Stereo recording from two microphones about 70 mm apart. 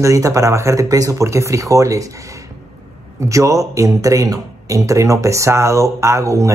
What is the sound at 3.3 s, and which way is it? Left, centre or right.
A man's voice, right.